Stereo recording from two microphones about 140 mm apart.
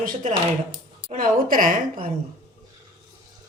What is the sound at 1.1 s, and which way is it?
A woman's voice, 75° right (ahead or behind).